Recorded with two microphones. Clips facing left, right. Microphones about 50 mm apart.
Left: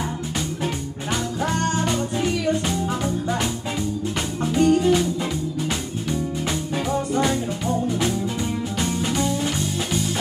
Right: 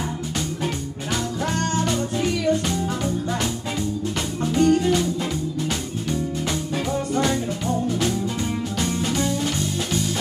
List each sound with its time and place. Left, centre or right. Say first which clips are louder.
1.4 s music: left 1 dB; centre
4.4 s music: even; centre
6.9 s music: left 1 dB; centre